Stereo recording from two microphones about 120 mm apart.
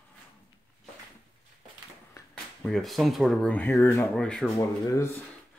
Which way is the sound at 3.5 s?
15° left (ahead or behind).